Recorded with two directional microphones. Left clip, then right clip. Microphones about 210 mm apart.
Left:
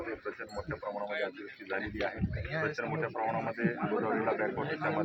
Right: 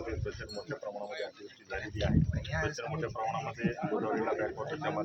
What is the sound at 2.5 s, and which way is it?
Speech, 50° right (ahead or behind).